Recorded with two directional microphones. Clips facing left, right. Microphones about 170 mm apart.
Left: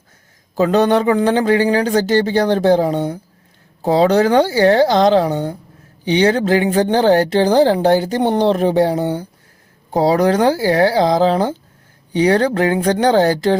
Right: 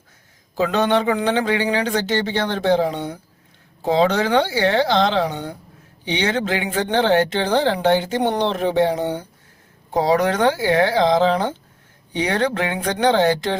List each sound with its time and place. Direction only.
0.5 s speech: 40° left (ahead or behind)